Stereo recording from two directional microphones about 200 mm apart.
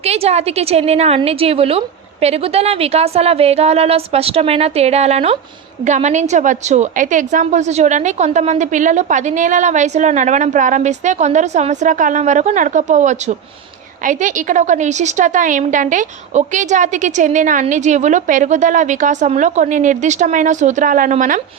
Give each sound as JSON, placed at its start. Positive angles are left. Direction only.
{"t": 0.0, "sound": "a woman's voice", "side_deg": -30}